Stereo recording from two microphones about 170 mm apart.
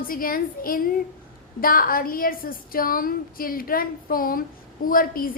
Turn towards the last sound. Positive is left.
turn(degrees=55)  # may be behind; listen again after turning